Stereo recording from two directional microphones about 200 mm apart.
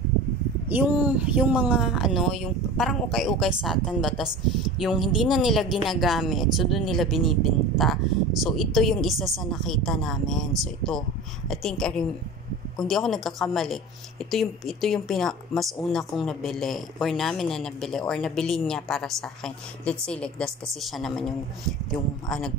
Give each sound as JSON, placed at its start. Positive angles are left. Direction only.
{"t": 0.7, "sound": "a woman's voice", "side_deg": -10}